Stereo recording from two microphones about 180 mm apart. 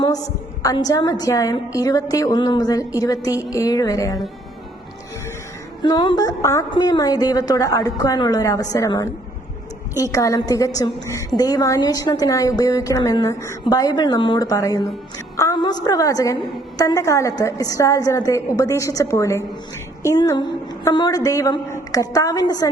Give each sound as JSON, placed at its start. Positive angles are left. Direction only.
{"t": 0.6, "sound": "a woman's voice", "side_deg": 20}
{"t": 5.8, "sound": "a woman's voice", "side_deg": 25}